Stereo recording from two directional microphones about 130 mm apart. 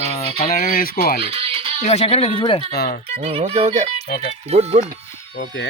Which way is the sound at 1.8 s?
55° left (ahead or behind).